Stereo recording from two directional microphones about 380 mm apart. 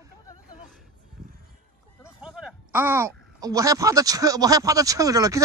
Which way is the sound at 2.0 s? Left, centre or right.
Centre.